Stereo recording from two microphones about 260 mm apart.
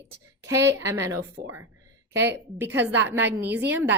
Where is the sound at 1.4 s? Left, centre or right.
Right.